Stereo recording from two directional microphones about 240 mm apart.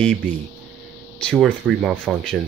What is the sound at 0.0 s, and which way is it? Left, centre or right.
Speech, centre.